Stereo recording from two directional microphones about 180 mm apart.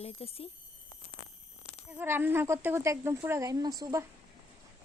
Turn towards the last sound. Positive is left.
turn(degrees=-20)  # may be behind; listen again after turning